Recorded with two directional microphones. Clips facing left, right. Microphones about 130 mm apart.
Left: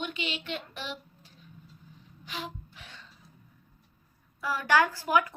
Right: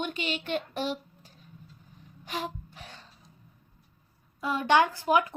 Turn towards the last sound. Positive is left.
turn(degrees=-25)  # may be behind; listen again after turning